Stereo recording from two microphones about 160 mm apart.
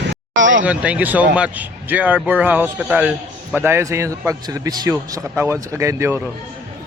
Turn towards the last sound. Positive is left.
turn(degrees=-15)  # may be behind; listen again after turning